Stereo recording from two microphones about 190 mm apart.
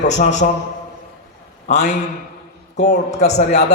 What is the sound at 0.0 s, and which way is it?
Speech, 35° left (ahead or behind).